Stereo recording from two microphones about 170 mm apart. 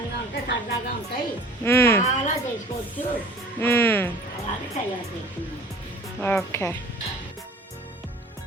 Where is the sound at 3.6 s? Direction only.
15° left (ahead or behind).